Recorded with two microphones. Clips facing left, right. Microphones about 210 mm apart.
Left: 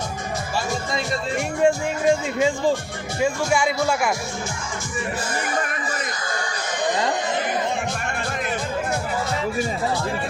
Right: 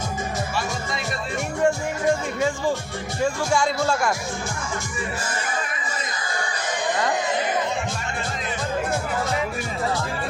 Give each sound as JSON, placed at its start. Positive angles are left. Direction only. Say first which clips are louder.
{"t": 1.6, "sound": "music", "louder": "left 2 dB", "side_deg": 15}
{"t": 3.2, "sound": "speech", "louder": "left 1 dB", "side_deg": 5}